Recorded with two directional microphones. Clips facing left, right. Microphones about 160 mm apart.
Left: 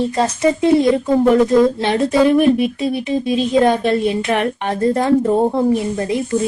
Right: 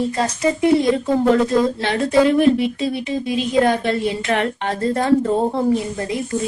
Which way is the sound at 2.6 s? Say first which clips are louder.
Left 2 dB; 20° right (ahead or behind).